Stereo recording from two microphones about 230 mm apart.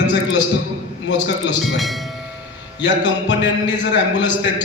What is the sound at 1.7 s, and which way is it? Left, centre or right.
Speech, centre.